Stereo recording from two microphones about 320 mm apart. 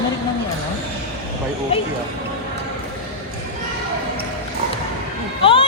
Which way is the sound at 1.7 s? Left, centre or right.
Centre.